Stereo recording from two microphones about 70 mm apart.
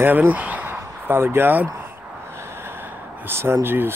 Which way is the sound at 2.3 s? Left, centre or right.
Right.